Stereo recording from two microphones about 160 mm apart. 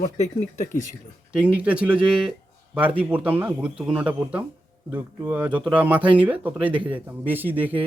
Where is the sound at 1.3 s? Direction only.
5° right (ahead or behind).